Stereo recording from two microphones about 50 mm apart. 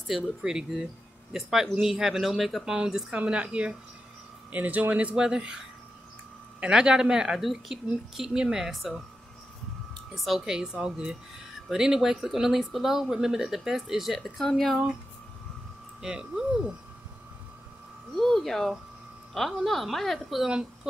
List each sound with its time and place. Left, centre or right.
0.4 s speech: centre
2.6 s speech: centre
3.1 s a woman's voice: right
5.1 s speech: centre
6.6 s speech: centre
7.3 s a woman's voice: centre
10.1 s speech: centre
16.0 s speech: centre
18.1 s a woman's voice: centre